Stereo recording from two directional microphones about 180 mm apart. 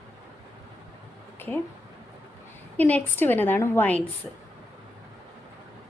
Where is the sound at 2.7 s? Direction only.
10° left (ahead or behind).